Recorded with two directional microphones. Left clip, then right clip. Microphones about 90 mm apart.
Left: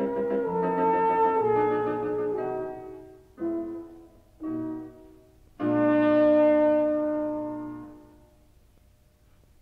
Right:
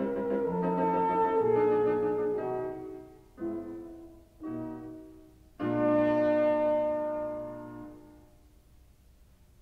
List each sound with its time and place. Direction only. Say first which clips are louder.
0.0 s music: left 3 dB; 30° right (ahead or behind)
5.6 s brass instrument: left 4 dB; 25° right (ahead or behind)